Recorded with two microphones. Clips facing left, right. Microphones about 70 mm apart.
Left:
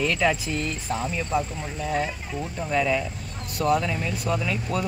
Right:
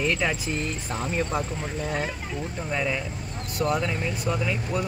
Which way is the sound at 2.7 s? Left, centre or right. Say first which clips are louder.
Left 5 dB; centre.